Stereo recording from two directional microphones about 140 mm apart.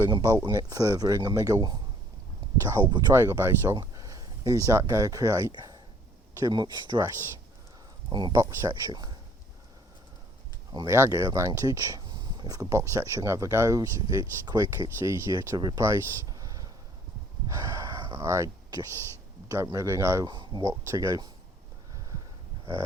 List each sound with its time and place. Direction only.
0.1 s speech: 25° right (ahead or behind)
3.1 s speech: 20° right (ahead or behind)
8.1 s speech: 30° right (ahead or behind)
10.7 s speech: 25° right (ahead or behind)
17.7 s speech: 25° right (ahead or behind)
20.2 s speech: 30° right (ahead or behind)